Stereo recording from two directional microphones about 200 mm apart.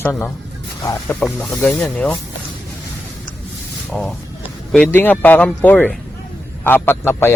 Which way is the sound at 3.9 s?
5° left (ahead or behind).